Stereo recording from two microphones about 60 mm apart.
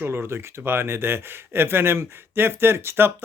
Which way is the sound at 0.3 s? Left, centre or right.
Right.